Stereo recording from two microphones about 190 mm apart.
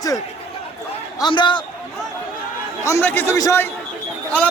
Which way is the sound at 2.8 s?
10° left (ahead or behind).